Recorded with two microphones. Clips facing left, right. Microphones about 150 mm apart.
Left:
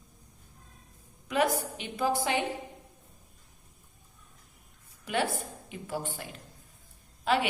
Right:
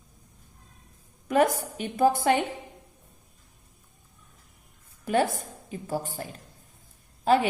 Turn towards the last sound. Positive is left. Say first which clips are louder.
# right 5 dB
turn(degrees=-40)  # may be behind; listen again after turning